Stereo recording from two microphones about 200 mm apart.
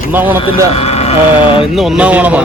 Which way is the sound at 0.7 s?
30° left (ahead or behind).